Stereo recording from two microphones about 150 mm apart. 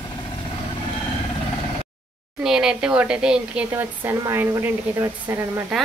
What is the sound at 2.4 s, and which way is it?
A woman's voice, 5° right (ahead or behind).